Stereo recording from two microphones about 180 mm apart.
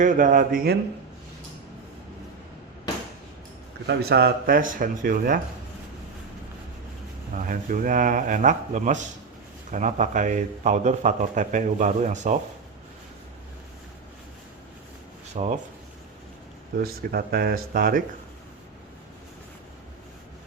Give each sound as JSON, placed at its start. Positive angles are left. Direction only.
{"t": 0.0, "sound": "speech", "side_deg": -45}
{"t": 3.8, "sound": "speech", "side_deg": -60}
{"t": 7.3, "sound": "speech", "side_deg": -50}
{"t": 15.4, "sound": "speech", "side_deg": -40}
{"t": 16.8, "sound": "speech", "side_deg": -55}